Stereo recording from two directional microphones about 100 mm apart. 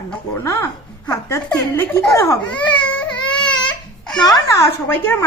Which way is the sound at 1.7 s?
25° left (ahead or behind).